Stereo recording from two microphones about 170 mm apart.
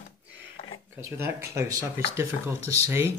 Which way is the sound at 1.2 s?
15° right (ahead or behind).